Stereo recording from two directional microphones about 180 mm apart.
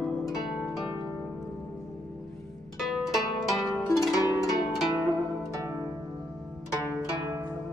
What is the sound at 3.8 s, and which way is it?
Pizzicato, 20° left (ahead or behind).